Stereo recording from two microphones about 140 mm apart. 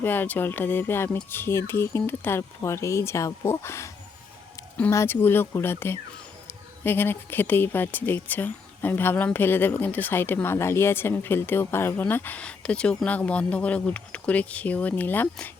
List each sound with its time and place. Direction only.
0.0 s a woman's voice: 15° left (ahead or behind)